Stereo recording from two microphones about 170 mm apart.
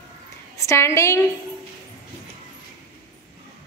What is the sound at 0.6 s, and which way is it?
Speech, 15° left (ahead or behind).